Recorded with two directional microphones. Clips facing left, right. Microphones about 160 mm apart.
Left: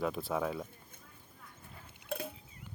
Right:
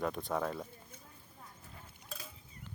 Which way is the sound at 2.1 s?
60° left (ahead or behind).